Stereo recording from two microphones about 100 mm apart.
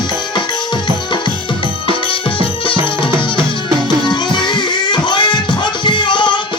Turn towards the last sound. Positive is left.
turn(degrees=50)  # may be behind; listen again after turning